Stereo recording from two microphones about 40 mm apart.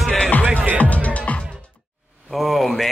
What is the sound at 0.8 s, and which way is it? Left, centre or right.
Music, left.